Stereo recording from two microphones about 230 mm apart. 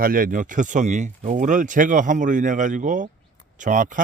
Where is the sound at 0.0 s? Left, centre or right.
Right.